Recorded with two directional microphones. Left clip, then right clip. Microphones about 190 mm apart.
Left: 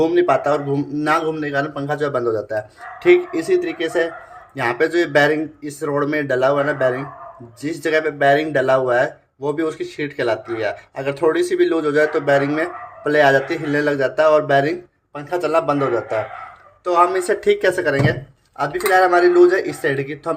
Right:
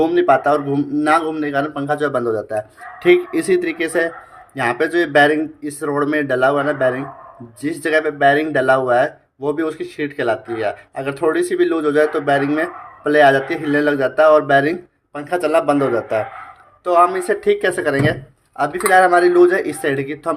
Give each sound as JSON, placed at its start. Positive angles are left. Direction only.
{"t": 0.0, "sound": "speech", "side_deg": -15}
{"t": 4.5, "sound": "speech", "side_deg": -15}
{"t": 17.1, "sound": "speech", "side_deg": -5}
{"t": 17.9, "sound": "speech", "side_deg": -20}